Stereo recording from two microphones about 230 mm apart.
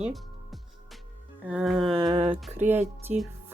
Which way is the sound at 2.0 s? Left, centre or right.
Right.